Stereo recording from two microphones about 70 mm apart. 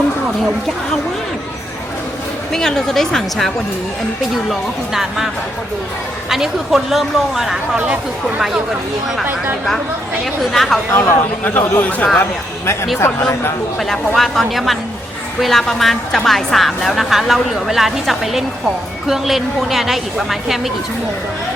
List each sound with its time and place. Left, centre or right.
2.5 s a woman's voice: centre
4.9 s a woman's voice: centre
6.3 s a woman's voice: centre
10.5 s a woman's voice: centre
10.9 s speech: left
13.7 s a woman's voice: centre